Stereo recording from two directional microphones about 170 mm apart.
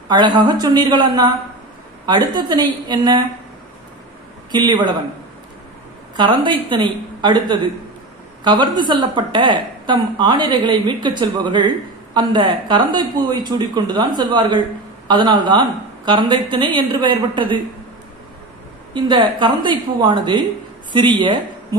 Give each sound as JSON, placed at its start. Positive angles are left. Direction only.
{"t": 0.1, "sound": "a woman's voice", "side_deg": -25}
{"t": 4.5, "sound": "a woman's voice", "side_deg": -25}
{"t": 6.1, "sound": "a woman's voice", "side_deg": -25}
{"t": 18.9, "sound": "a woman's voice", "side_deg": -25}